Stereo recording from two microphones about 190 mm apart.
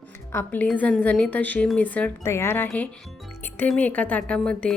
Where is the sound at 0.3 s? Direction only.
10° left (ahead or behind).